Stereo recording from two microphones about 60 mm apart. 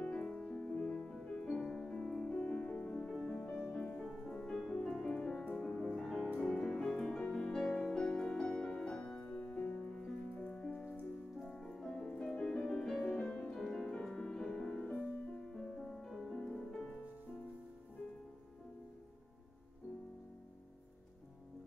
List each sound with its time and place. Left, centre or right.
0.0 s music: left
0.3 s music: centre
4.0 s music: centre
13.2 s music: left
13.5 s music: centre
16.1 s music: centre